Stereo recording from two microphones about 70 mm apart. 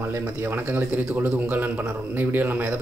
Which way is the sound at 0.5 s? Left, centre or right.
Right.